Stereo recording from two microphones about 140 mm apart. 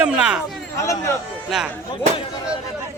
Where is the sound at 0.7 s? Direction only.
20° left (ahead or behind).